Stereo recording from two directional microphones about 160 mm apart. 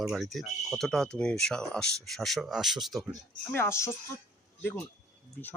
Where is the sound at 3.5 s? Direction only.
15° left (ahead or behind).